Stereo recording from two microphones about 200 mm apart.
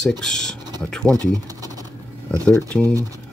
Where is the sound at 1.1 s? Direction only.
15° right (ahead or behind).